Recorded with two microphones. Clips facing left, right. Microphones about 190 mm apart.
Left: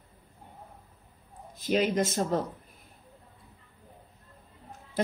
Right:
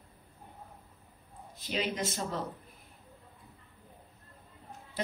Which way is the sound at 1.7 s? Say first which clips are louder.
Left 8 dB; 45° left (ahead or behind).